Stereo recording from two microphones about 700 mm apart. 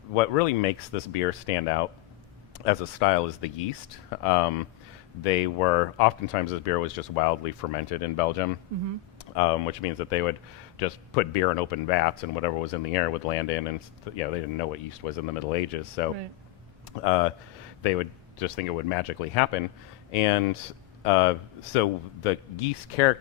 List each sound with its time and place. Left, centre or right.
0.1 s speech: left
10.1 s speech: left